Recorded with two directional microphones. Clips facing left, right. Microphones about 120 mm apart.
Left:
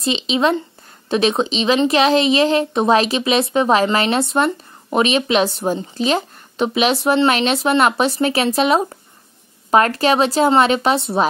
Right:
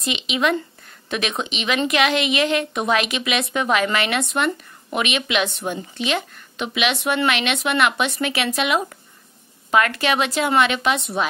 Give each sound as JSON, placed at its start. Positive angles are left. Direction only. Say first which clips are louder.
{"t": 0.0, "sound": "speech", "louder": "left 5 dB", "side_deg": 30}